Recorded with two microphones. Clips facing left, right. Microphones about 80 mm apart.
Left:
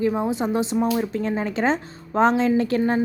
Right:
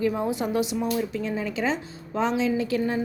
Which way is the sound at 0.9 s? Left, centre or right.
Left.